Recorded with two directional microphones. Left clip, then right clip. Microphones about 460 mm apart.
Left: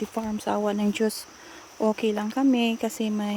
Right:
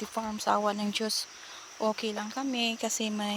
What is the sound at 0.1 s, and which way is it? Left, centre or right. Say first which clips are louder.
Speech: right 4 dB; centre.